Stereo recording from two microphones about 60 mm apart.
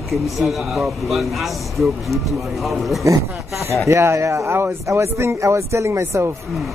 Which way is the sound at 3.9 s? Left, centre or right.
Right.